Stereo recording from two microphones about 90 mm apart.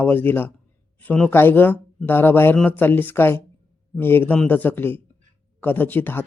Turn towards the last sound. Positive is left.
turn(degrees=20)  # may be behind; listen again after turning